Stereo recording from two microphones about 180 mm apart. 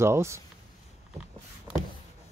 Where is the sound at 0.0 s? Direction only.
15° right (ahead or behind).